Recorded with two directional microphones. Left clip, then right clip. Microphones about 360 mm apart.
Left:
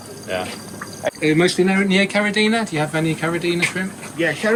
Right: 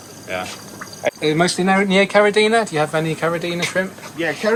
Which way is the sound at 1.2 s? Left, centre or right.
Centre.